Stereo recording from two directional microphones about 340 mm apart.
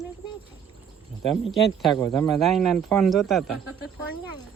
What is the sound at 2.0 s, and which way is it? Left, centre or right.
Speech, centre.